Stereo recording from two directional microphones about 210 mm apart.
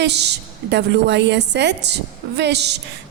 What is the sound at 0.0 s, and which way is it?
A woman's voice, 55° right (ahead or behind).